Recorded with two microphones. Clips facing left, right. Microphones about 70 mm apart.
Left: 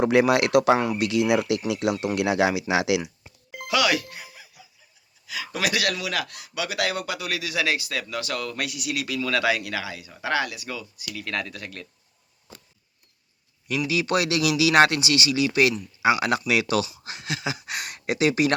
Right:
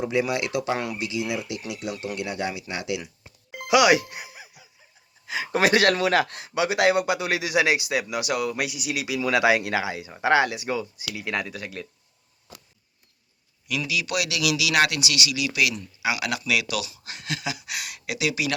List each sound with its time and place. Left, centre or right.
0.0 s speech: left
3.7 s music: centre
5.2 s speech: right; by 11.9 s centre
13.7 s a man's voice: left
17.0 s a man's voice: left